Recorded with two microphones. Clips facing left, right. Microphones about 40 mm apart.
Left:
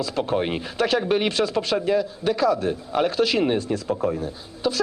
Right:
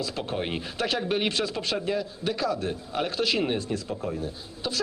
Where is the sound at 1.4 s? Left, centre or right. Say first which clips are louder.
Left 6 dB; left.